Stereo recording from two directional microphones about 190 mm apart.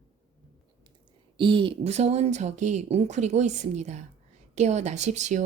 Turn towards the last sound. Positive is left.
turn(degrees=-40)  # may be behind; listen again after turning